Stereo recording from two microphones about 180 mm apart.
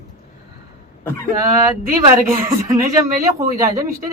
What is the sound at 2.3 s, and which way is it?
Speech, 15° right (ahead or behind).